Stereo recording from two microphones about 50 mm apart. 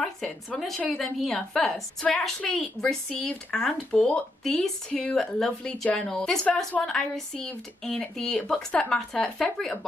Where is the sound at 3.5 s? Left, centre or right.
Centre.